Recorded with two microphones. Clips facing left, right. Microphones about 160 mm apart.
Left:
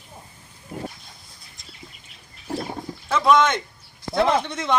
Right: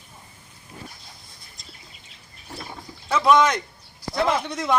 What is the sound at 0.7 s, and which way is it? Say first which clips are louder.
Dog: left 9 dB; 60° left (ahead or behind).